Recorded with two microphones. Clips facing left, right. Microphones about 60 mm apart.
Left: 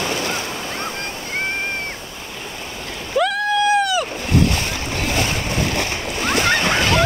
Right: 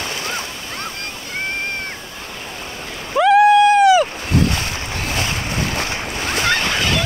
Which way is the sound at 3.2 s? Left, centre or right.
Right.